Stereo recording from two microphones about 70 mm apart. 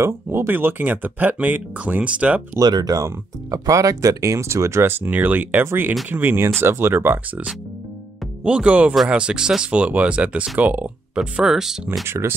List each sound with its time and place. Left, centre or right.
0.0 s speech: right; by 2.4 s centre
2.6 s speech: right
5.0 s speech: right
8.5 s speech: centre
11.1 s speech: centre
12.1 s speech: right